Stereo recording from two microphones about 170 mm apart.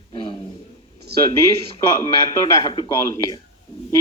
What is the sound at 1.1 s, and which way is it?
Speech, 70° right (ahead or behind).